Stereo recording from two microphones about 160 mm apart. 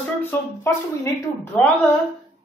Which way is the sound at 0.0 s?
15° left (ahead or behind).